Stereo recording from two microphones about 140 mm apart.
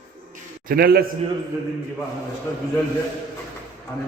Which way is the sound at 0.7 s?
90° right.